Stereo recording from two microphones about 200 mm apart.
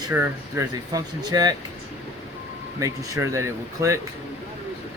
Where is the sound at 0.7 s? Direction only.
20° right (ahead or behind).